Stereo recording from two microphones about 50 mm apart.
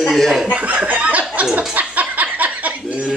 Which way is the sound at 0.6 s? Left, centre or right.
Right.